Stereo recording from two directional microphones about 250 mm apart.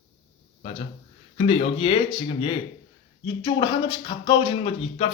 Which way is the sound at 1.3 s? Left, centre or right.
Left.